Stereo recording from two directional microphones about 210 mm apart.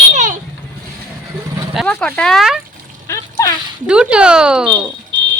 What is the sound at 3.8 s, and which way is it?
Speech, 5° right (ahead or behind).